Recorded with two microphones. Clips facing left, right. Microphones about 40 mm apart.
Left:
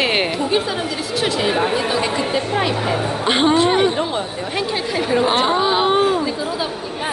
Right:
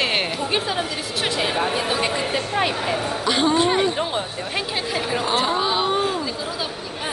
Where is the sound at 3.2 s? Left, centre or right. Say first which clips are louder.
Left 4 dB; left.